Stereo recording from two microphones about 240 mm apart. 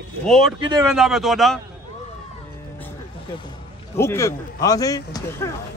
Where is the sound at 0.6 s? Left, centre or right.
Centre.